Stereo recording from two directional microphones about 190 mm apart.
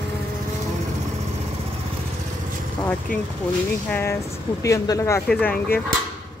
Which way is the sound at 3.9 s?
15° left (ahead or behind).